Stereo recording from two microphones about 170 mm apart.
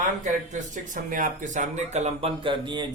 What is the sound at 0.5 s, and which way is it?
Speech, 45° right (ahead or behind).